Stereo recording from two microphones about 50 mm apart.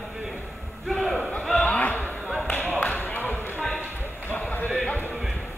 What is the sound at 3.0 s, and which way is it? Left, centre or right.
Basketball bounce, left.